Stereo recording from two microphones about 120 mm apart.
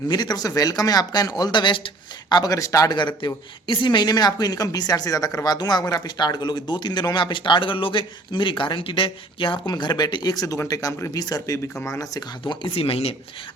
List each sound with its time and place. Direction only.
0.1 s speech: 35° left (ahead or behind)
2.3 s speech: 30° left (ahead or behind)
12.5 s speech: 50° left (ahead or behind)